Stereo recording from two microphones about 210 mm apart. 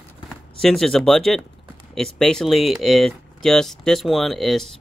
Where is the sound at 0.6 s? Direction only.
Centre (ahead or behind).